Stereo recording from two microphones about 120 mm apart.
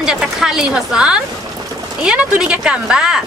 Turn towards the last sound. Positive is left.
turn(degrees=-5)  # may be behind; listen again after turning